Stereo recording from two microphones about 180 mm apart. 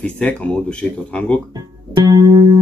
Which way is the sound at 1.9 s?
20° right (ahead or behind).